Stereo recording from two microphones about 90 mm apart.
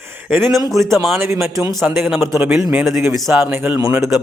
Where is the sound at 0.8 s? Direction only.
35° right (ahead or behind).